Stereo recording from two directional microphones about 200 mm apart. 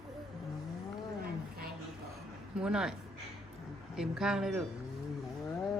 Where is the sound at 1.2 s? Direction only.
50° right (ahead or behind).